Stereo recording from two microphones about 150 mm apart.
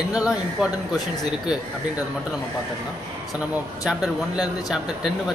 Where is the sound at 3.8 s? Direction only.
5° right (ahead or behind).